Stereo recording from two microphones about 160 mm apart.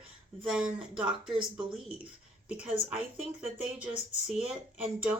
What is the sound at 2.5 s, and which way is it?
Speech, 5° right (ahead or behind).